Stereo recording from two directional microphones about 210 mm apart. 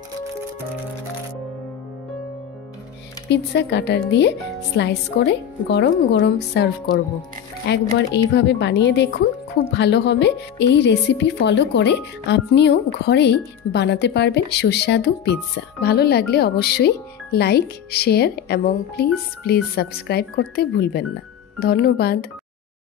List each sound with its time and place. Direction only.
3.3 s a woman's voice: 55° left (ahead or behind)